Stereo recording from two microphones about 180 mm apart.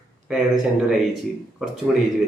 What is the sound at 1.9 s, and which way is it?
Speech, centre (ahead or behind).